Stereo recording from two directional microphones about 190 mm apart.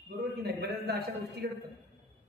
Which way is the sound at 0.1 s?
55° right (ahead or behind).